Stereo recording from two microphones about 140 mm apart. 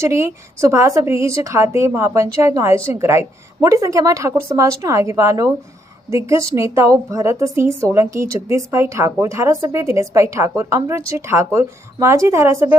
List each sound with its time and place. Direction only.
0.0 s a woman's voice: 20° right (ahead or behind)